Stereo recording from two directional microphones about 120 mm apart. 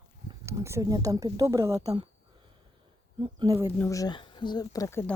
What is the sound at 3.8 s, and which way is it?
Speech, 25° left (ahead or behind).